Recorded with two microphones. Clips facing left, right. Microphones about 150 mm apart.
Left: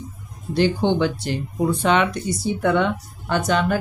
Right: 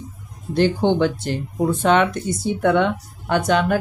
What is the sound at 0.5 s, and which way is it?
Speech, 50° right (ahead or behind).